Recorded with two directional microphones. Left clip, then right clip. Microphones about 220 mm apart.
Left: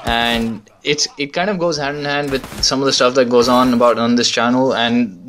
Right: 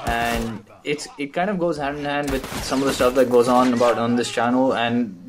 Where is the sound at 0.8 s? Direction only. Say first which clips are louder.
Left 9 dB; 35° left (ahead or behind).